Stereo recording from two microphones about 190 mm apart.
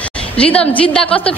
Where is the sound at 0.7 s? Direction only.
5° left (ahead or behind).